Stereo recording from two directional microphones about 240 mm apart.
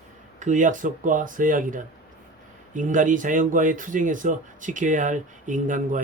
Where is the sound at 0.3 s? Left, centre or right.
Right.